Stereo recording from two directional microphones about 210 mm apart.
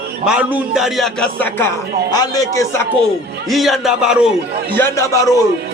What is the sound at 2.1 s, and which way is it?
Speech, 20° left (ahead or behind).